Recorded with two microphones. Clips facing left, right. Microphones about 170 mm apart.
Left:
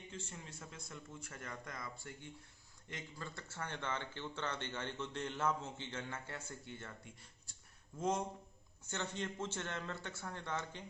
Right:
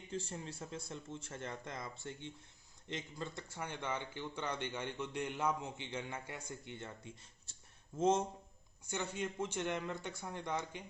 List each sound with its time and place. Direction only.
0.1 s speech: 35° right (ahead or behind)
8.9 s speech: 10° right (ahead or behind)